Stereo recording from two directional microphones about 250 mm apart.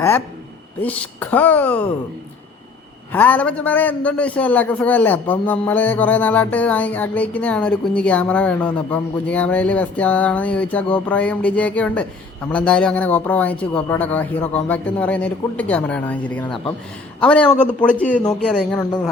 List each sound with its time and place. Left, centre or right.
0.8 s speech: centre
3.1 s a man's voice: centre
18.8 s speech: centre